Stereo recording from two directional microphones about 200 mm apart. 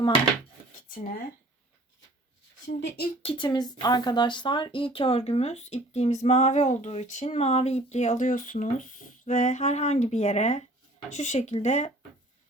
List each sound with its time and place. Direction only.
0.9 s speech: 45° left (ahead or behind)
2.6 s speech: 55° left (ahead or behind)
3.2 s speech: 25° left (ahead or behind)